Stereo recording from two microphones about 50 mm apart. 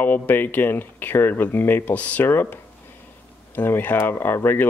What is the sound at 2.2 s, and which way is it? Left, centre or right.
Speech, left.